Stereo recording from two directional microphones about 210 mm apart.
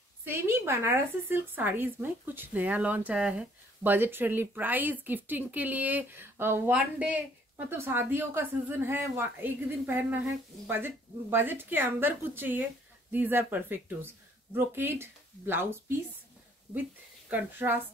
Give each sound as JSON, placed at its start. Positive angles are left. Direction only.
{"t": 0.2, "sound": "speech", "side_deg": -10}
{"t": 17.3, "sound": "speech", "side_deg": -10}